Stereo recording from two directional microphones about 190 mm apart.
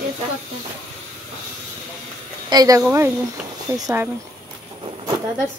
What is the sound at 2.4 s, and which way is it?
A woman's voice, 20° right (ahead or behind).